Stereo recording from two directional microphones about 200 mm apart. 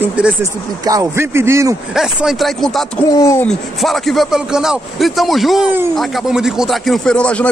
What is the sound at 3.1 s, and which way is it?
Speech, 15° left (ahead or behind).